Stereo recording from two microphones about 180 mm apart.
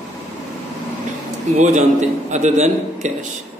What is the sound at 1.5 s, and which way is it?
A man's voice, 40° right (ahead or behind).